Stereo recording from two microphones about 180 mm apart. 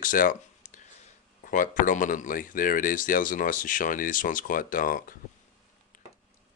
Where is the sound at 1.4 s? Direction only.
45° left (ahead or behind).